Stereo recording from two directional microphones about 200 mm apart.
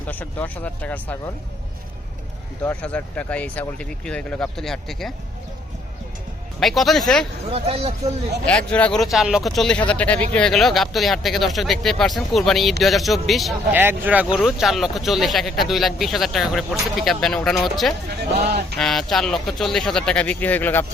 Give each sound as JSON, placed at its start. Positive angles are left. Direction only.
{"t": 0.1, "sound": "speech", "side_deg": 10}
{"t": 2.6, "sound": "speech", "side_deg": 5}
{"t": 6.6, "sound": "speech", "side_deg": 0}
{"t": 7.5, "sound": "speech", "side_deg": -30}
{"t": 8.4, "sound": "speech", "side_deg": 5}
{"t": 18.4, "sound": "a sound", "side_deg": -55}
{"t": 18.8, "sound": "speech", "side_deg": 0}